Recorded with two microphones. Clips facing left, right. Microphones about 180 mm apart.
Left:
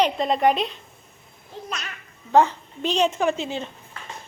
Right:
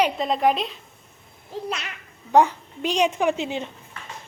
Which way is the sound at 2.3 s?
15° right (ahead or behind).